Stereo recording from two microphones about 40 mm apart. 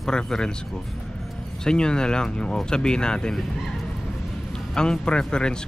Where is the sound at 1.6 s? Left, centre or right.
Centre.